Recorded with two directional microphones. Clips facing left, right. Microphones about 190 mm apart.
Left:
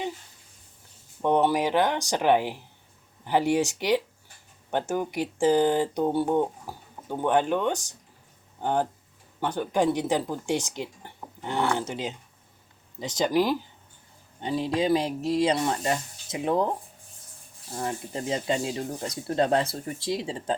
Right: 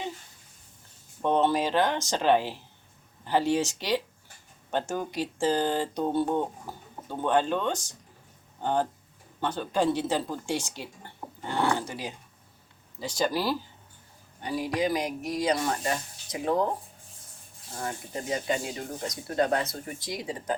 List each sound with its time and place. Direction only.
1.2 s speech: 15° left (ahead or behind)
17.7 s speech: 25° left (ahead or behind)